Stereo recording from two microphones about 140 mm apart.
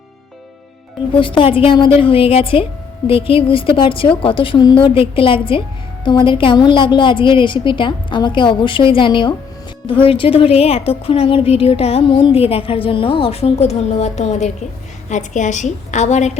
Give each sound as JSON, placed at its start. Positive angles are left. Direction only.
{"t": 1.1, "sound": "a woman's voice", "side_deg": 35}